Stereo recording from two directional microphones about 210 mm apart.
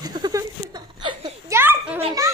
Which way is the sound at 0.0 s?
20° right (ahead or behind).